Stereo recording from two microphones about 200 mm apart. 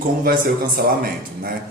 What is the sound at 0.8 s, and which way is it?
Speech, 50° right (ahead or behind).